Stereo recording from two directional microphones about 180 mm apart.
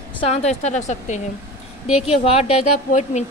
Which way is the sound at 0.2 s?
35° left (ahead or behind).